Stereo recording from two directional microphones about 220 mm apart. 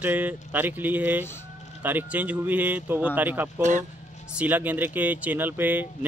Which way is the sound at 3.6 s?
35° right (ahead or behind).